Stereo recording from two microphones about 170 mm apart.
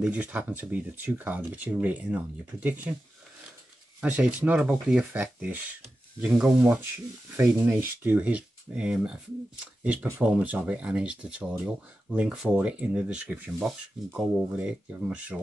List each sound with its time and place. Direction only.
0.0 s speech: 10° right (ahead or behind)
4.0 s speech: 10° right (ahead or behind)